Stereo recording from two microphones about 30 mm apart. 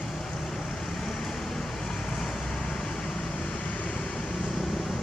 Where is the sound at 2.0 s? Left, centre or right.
Centre.